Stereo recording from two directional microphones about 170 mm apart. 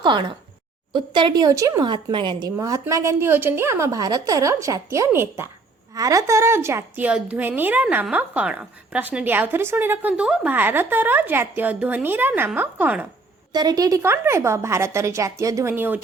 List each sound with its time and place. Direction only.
0.0 s a woman's voice: 30° right (ahead or behind); by 13.1 s 10° right (ahead or behind)
13.5 s a woman's voice: 25° right (ahead or behind)